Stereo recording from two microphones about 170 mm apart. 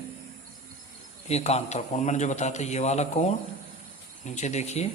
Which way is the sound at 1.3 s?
40° left (ahead or behind).